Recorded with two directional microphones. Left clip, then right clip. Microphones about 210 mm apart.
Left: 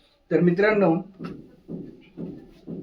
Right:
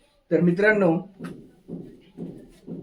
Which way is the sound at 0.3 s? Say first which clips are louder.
Even; 15° left (ahead or behind).